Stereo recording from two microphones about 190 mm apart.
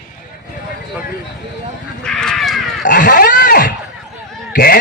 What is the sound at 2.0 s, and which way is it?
Crow, 5° left (ahead or behind).